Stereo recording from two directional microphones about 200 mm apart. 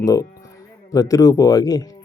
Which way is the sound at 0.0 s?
15° left (ahead or behind).